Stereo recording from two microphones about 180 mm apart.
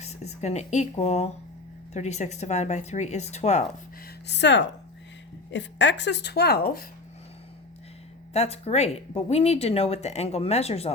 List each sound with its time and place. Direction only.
0.0 s speech: 35° left (ahead or behind)
4.0 s a woman's voice: 70° left (ahead or behind)
8.3 s speech: 35° left (ahead or behind)